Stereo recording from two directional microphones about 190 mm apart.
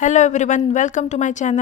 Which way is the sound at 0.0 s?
40° left (ahead or behind).